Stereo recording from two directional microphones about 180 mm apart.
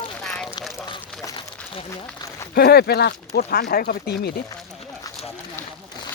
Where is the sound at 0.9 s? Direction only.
25° left (ahead or behind).